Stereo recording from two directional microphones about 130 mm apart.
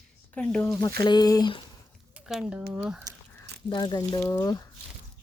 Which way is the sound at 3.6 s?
35° left (ahead or behind).